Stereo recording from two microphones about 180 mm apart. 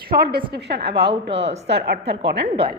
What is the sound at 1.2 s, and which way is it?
Speech, 80° right.